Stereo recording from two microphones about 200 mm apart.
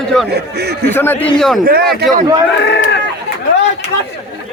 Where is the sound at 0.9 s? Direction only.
10° left (ahead or behind).